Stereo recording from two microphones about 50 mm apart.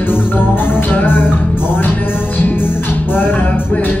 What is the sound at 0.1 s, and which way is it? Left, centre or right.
Music, left.